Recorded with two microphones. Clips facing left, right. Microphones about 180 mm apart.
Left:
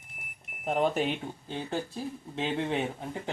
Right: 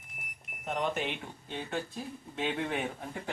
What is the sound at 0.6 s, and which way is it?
Speech, 35° left (ahead or behind).